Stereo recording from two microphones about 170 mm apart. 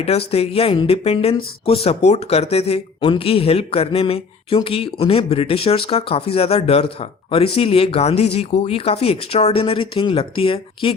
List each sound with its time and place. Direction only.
0.0 s speech: 35° left (ahead or behind)